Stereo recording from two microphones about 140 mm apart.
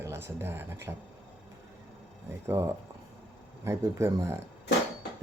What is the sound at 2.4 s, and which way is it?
Speech, 20° right (ahead or behind).